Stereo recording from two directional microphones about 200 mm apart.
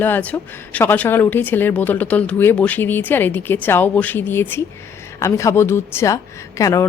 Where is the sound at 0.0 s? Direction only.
10° left (ahead or behind).